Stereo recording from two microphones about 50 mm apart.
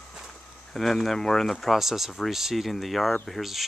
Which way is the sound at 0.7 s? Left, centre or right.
Centre.